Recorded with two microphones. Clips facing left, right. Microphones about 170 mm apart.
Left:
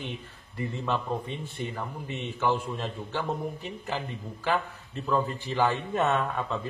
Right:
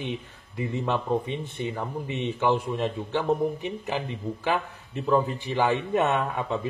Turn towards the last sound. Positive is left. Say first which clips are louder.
# right 2 dB
turn(degrees=-15)  # may be behind; listen again after turning